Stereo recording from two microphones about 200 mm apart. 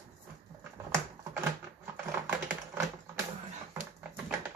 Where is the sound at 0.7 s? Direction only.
10° right (ahead or behind).